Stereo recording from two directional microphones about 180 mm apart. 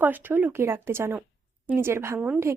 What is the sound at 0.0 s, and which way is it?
A woman's voice, 10° right (ahead or behind).